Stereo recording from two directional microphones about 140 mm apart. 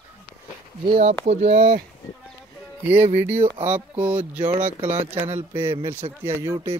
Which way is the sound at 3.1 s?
15° right (ahead or behind).